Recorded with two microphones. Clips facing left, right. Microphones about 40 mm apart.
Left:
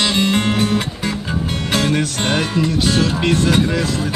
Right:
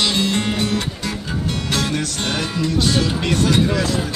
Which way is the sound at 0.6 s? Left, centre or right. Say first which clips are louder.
Left 3 dB; centre.